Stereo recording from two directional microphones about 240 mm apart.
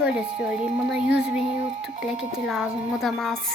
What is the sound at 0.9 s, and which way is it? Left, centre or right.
Speech, centre.